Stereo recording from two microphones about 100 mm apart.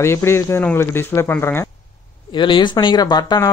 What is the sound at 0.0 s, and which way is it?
Speech, 25° left (ahead or behind).